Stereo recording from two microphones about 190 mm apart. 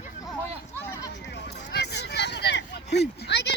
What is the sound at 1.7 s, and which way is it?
Vehicle, 60° left (ahead or behind).